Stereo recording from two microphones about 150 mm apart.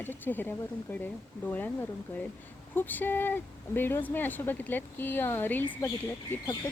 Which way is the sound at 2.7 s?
15° left (ahead or behind).